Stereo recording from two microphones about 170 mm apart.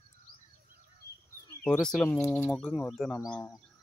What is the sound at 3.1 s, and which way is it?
Speech, 15° left (ahead or behind).